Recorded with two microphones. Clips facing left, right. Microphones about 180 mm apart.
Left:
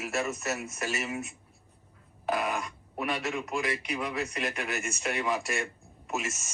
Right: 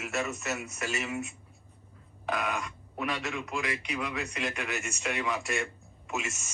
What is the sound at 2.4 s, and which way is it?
Speech, centre (ahead or behind).